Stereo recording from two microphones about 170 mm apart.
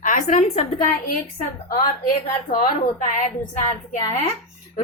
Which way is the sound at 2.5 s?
55° left (ahead or behind).